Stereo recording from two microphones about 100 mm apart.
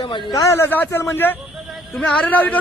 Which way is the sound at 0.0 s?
55° left (ahead or behind).